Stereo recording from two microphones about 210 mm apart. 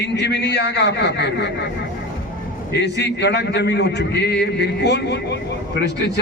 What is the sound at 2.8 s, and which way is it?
A man's voice, 55° left (ahead or behind).